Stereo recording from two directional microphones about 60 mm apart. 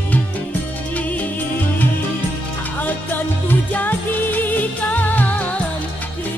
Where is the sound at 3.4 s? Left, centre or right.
Left.